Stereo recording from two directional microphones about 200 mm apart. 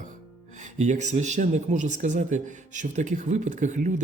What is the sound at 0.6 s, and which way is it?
Speech, 35° right (ahead or behind).